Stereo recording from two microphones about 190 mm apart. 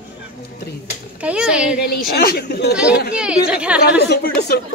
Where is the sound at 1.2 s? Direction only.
5° right (ahead or behind).